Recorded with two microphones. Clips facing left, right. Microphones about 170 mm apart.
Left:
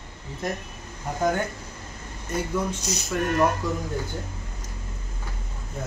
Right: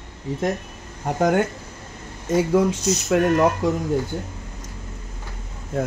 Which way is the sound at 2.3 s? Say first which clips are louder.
Right 9 dB; 90° right.